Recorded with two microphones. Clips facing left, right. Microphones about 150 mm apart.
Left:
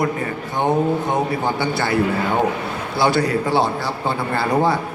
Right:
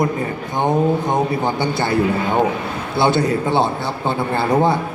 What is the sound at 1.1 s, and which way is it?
Speech, 20° right (ahead or behind).